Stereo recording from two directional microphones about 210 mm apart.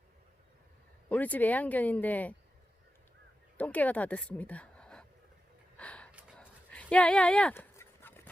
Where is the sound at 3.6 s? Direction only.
5° left (ahead or behind).